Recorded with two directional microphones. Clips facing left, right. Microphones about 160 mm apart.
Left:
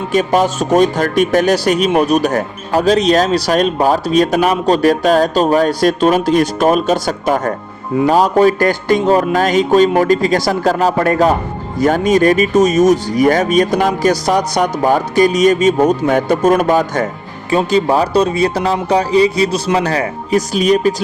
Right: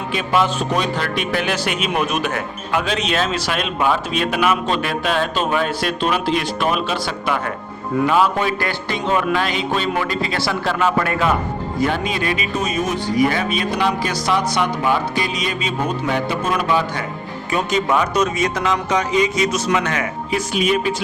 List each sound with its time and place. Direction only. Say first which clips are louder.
0.1 s speech: left 6 dB; 40° left (ahead or behind)
17.5 s speech: left 6 dB; 30° left (ahead or behind)